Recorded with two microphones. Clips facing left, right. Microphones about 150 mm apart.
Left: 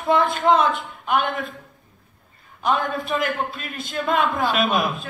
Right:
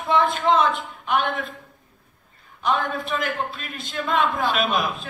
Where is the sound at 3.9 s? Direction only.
45° left (ahead or behind).